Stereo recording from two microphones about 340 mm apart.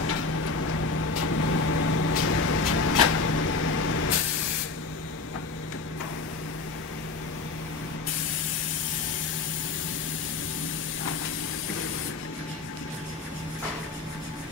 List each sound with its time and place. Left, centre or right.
0.9 s vehicle: left